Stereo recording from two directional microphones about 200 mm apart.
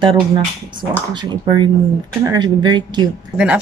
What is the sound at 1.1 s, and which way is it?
Speech, 25° right (ahead or behind).